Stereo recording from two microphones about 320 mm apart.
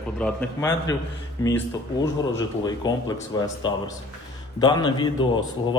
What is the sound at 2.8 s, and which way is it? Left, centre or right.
A man's voice, centre.